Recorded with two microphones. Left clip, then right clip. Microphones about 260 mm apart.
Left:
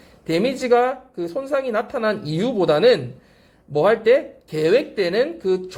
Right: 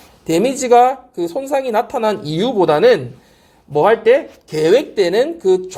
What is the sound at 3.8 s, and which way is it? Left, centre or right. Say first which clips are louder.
Speech: right 4 dB; centre.